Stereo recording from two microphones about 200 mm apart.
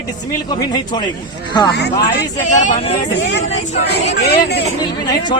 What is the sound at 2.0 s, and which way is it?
Speech, 55° left (ahead or behind).